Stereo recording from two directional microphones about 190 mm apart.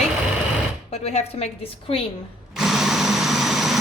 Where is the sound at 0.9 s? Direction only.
35° left (ahead or behind).